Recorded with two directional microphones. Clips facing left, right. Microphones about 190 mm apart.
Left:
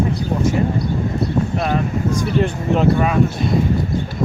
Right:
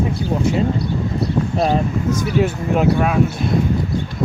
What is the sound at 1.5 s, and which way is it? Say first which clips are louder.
Speech: right 6 dB; 30° right (ahead or behind).